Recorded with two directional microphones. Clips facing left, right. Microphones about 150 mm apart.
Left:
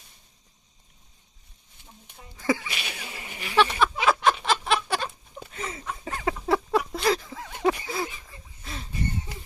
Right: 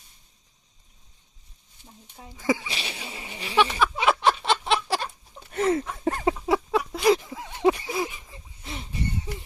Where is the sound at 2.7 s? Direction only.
30° right (ahead or behind).